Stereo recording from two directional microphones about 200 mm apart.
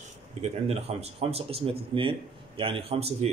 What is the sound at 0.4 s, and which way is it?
Speech, 30° right (ahead or behind).